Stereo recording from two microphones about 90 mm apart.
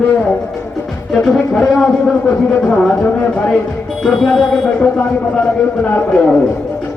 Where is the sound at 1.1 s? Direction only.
5° left (ahead or behind).